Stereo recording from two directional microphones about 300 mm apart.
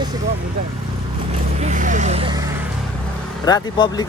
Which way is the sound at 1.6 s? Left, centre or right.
Right.